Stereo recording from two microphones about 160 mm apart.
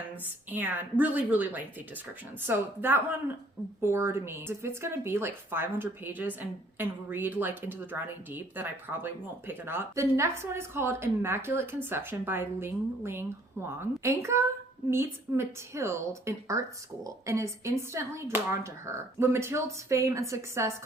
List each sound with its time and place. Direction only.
0.5 s a woman's voice: 10° right (ahead or behind)